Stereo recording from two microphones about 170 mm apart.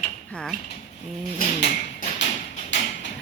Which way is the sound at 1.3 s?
55° left (ahead or behind).